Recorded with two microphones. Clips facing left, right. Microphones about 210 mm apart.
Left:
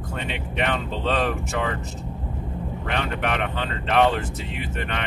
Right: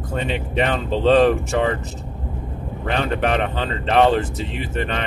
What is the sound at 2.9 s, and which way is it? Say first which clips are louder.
Speech: right 6 dB; 35° right (ahead or behind).